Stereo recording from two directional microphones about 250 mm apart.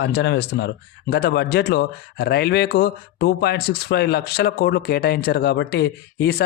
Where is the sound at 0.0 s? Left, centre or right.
Left.